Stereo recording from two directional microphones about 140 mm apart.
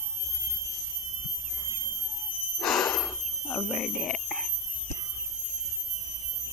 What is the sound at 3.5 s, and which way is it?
Squeal, 15° left (ahead or behind).